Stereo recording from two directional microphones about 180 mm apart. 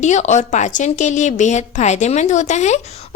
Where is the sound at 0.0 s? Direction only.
40° left (ahead or behind).